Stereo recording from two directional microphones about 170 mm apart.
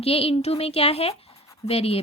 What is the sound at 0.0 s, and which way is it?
A woman's voice, 35° left (ahead or behind).